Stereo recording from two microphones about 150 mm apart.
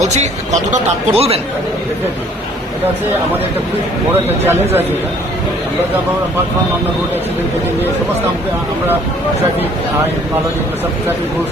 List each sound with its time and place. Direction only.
0.0 s speech: 50° right (ahead or behind)
4.4 s speech: 15° right (ahead or behind)